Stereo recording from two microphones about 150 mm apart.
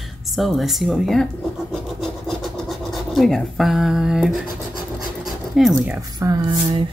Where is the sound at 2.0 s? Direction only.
Centre (ahead or behind).